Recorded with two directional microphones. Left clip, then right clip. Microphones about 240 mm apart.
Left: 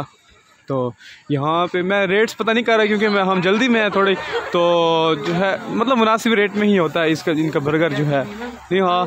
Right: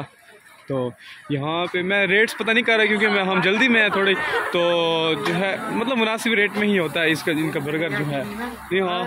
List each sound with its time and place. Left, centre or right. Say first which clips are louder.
0.7 s speech: left 3 dB; left